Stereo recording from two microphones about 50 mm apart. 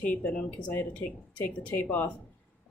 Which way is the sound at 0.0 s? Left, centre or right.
Left.